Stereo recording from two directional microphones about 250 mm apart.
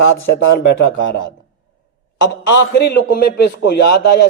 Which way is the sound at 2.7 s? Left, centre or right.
Left.